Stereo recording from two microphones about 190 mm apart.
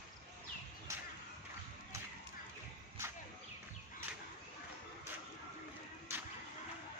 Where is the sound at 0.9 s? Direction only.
15° right (ahead or behind).